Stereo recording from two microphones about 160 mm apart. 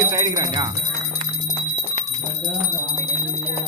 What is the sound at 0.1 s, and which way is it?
Speech, 20° right (ahead or behind).